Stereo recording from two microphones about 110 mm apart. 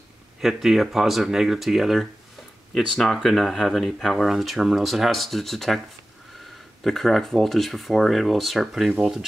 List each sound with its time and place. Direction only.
0.4 s speech: centre (ahead or behind)
6.8 s speech: centre (ahead or behind)